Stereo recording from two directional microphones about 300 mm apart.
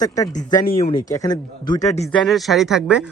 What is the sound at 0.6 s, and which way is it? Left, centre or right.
Speech, left.